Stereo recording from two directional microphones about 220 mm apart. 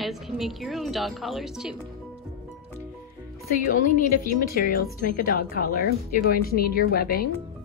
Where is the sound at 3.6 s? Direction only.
40° left (ahead or behind).